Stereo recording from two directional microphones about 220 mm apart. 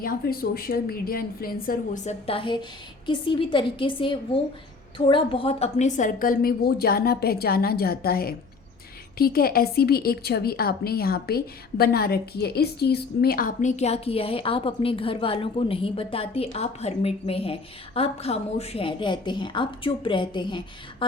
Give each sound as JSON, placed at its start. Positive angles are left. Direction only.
{"t": 0.0, "sound": "a woman's voice", "side_deg": 40}